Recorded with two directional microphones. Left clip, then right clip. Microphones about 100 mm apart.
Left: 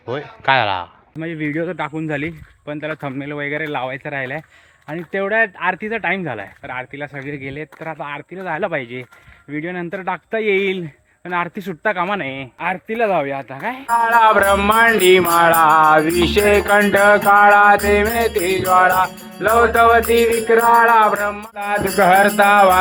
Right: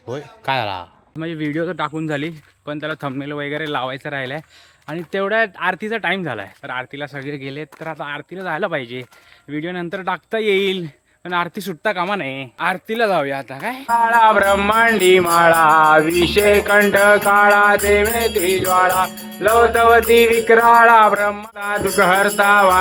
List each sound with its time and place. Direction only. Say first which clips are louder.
0.1 s speech: left 5 dB; 30° right (ahead or behind)
3.7 s speech: even; 40° right (ahead or behind); by 13.9 s 20° right (ahead or behind)
13.9 s music: even; 10° right (ahead or behind)
20.0 s speech: right 2 dB; 15° right (ahead or behind)
21.5 s music: even; 5° right (ahead or behind)